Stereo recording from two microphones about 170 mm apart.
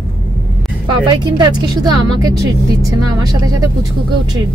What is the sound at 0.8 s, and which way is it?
Speech, 25° right (ahead or behind).